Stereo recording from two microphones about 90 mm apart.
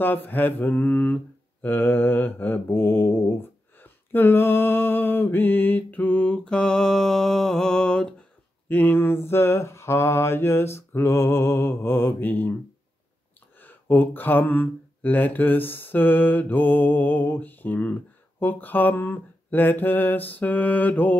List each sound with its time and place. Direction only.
0.0 s mantra: 20° left (ahead or behind)
8.6 s mantra: 20° left (ahead or behind)
13.6 s mantra: 20° left (ahead or behind)